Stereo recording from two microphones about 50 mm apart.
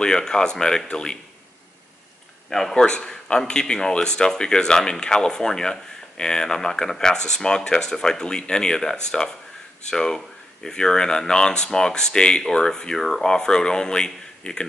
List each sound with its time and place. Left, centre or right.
0.0 s speech: centre
2.7 s speech: centre